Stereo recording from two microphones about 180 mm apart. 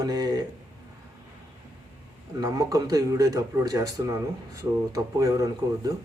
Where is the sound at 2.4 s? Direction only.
20° right (ahead or behind).